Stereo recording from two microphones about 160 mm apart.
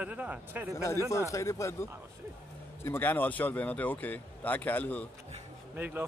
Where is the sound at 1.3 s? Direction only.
20° left (ahead or behind).